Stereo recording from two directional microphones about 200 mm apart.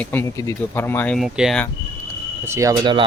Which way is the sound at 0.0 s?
10° left (ahead or behind).